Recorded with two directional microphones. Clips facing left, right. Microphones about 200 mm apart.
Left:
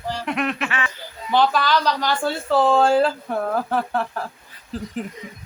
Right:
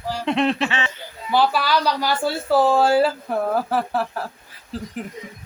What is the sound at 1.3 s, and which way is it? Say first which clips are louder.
Speech: left 1 dB; 10° right (ahead or behind).